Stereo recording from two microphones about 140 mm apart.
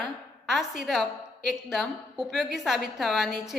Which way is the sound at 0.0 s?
Centre (ahead or behind).